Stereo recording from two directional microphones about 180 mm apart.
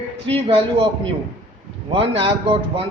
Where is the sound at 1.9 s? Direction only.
30° right (ahead or behind).